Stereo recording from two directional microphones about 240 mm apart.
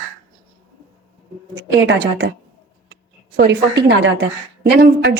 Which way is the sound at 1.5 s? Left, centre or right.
Right.